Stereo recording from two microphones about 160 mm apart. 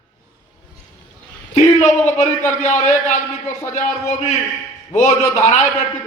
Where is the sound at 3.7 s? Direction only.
50° left (ahead or behind).